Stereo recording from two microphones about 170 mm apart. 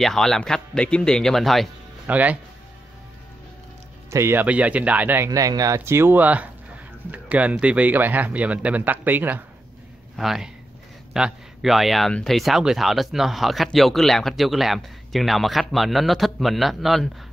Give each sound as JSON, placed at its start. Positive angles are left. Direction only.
{"t": 0.0, "sound": "speech", "side_deg": 0}
{"t": 4.1, "sound": "speech", "side_deg": -15}